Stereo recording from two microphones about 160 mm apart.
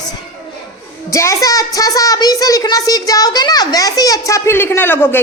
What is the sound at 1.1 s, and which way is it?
A child's voice, 20° left (ahead or behind).